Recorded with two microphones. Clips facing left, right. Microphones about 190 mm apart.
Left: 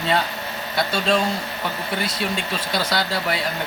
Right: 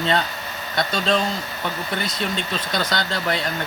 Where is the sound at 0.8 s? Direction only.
5° left (ahead or behind).